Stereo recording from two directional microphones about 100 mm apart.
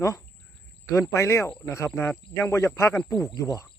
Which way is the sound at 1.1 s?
30° left (ahead or behind).